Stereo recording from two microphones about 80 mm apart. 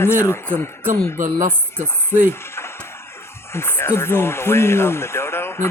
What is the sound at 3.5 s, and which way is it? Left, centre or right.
Speech, left.